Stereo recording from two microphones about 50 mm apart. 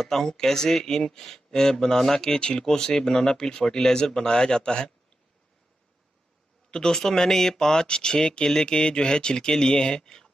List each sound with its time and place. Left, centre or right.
0.0 s speech: centre
6.7 s speech: centre